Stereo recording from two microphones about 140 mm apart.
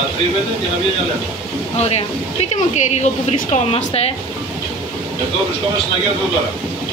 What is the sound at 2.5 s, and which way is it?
Speech, 55° left (ahead or behind).